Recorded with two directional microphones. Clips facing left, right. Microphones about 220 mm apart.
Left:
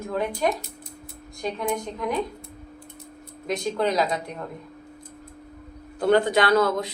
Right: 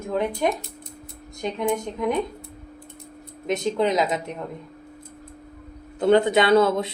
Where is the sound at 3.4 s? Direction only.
20° right (ahead or behind).